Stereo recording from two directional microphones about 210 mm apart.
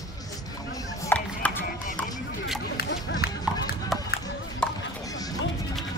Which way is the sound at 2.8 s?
50° left (ahead or behind).